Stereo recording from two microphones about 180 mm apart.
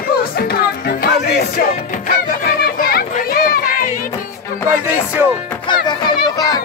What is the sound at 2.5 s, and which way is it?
Children playing, 60° left (ahead or behind).